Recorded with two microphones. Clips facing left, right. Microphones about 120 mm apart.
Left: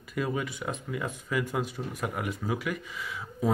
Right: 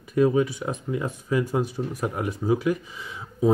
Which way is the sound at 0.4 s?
35° right (ahead or behind).